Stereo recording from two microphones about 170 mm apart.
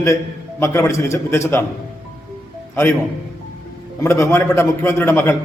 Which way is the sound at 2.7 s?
15° left (ahead or behind).